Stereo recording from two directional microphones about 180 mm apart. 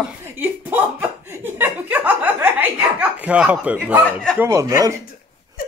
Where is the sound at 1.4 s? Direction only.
10° right (ahead or behind).